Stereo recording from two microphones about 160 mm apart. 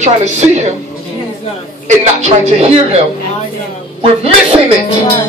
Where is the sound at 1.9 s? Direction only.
45° right (ahead or behind).